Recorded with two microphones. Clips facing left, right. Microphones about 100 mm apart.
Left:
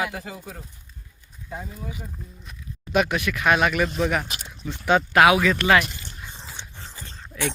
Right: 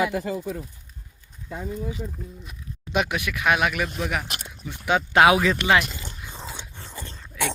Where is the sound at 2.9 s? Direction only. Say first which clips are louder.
Left 3 dB; 15° right (ahead or behind).